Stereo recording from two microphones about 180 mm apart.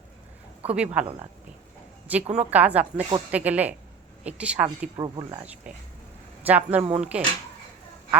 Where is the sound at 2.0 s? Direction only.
5° right (ahead or behind).